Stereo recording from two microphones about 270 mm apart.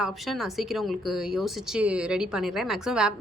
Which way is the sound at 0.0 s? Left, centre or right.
Centre.